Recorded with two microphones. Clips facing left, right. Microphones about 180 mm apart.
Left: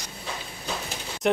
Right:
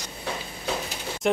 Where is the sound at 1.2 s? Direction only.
Centre (ahead or behind).